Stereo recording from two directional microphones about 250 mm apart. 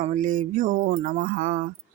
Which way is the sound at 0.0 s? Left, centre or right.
Right.